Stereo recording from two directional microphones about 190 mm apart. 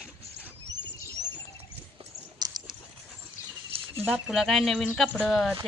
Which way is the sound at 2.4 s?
20° right (ahead or behind).